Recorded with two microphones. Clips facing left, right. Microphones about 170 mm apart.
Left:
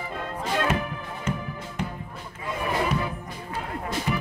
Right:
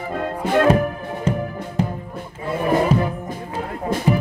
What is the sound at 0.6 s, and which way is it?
Music, 35° right (ahead or behind).